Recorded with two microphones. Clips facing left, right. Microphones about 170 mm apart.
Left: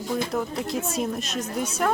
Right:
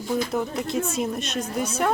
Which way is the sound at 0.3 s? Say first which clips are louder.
Right 2 dB; centre (ahead or behind).